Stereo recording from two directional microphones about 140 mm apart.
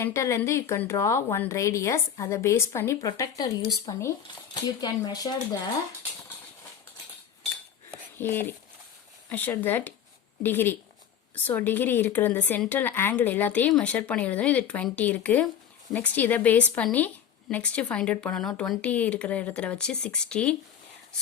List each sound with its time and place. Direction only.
0.0 s a woman's voice: 20° left (ahead or behind)
8.2 s a woman's voice: 15° left (ahead or behind)